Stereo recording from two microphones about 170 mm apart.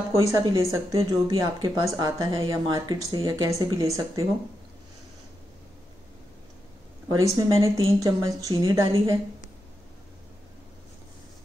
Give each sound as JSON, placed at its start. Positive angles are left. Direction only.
{"t": 0.1, "sound": "speech", "side_deg": -20}
{"t": 7.1, "sound": "speech", "side_deg": -20}